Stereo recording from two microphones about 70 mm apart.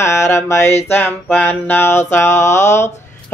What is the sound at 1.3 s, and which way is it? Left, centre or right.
Music, left.